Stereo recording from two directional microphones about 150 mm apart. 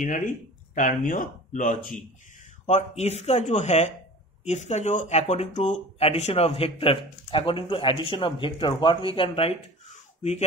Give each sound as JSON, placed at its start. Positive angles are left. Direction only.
{"t": 0.0, "sound": "speech", "side_deg": 60}
{"t": 2.6, "sound": "speech", "side_deg": 45}